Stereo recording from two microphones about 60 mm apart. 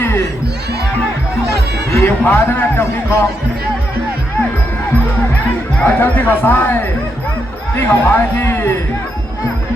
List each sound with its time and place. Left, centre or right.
2.0 s speech: left
5.8 s speech: left
7.8 s speech: left